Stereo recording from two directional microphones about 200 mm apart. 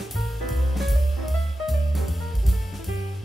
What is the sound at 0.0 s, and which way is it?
Music, centre (ahead or behind).